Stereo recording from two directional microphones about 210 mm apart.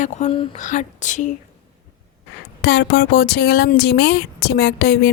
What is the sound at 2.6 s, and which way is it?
A woman's voice, 50° left (ahead or behind).